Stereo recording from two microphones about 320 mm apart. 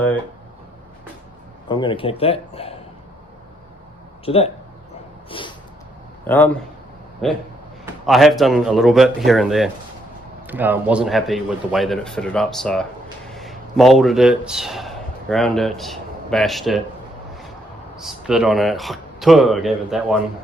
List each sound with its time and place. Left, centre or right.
1.6 s speech: centre
4.3 s speech: centre
5.3 s a sound: centre
6.2 s a man's voice: centre
17.9 s speech: centre